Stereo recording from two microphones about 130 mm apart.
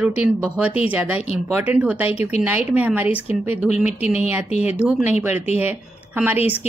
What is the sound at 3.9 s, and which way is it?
Speech, 55° left (ahead or behind).